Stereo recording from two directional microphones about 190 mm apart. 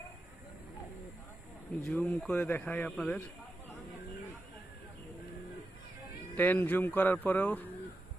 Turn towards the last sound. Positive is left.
turn(degrees=10)  # may be behind; listen again after turning